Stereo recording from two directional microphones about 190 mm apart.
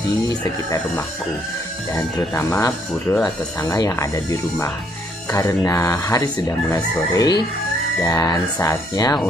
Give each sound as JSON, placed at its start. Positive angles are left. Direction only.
{"t": 0.4, "sound": "speech", "side_deg": 15}